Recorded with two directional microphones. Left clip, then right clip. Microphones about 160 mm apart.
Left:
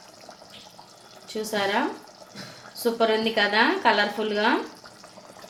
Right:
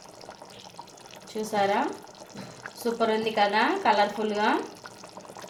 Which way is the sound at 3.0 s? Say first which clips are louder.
Left 2 dB; 50° left (ahead or behind).